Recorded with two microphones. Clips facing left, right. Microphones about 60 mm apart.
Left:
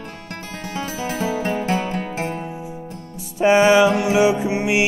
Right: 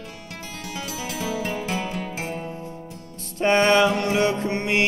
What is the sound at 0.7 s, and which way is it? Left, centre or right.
Music, left.